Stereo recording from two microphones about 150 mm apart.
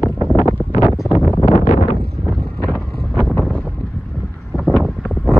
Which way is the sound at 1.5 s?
45° left (ahead or behind).